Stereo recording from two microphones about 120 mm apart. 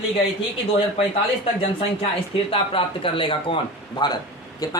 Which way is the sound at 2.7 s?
45° left (ahead or behind).